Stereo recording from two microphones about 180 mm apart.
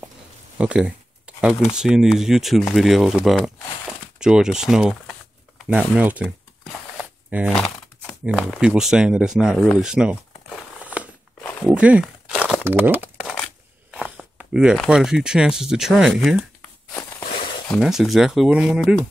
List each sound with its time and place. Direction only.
0.6 s a sound: 5° right (ahead or behind)
1.8 s speech: 5° right (ahead or behind)
7.2 s speech: 5° right (ahead or behind)
11.7 s crumpling: 5° right (ahead or behind)
12.6 s crumpling: 10° right (ahead or behind)
13.9 s speech: 5° right (ahead or behind)
17.2 s a sound: 30° left (ahead or behind)
17.7 s speech: 5° right (ahead or behind)